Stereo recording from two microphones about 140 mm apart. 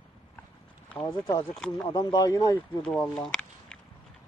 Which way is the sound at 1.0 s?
30° left (ahead or behind).